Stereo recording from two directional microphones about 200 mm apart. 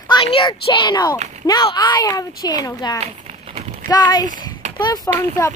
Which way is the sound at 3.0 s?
35° right (ahead or behind).